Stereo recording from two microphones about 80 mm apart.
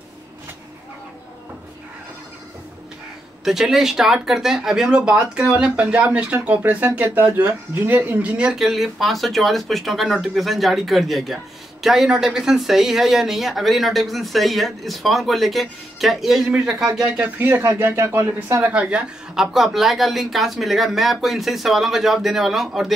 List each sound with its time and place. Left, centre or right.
3.4 s a man's voice: centre
17.4 s speech: right
18.7 s speech: centre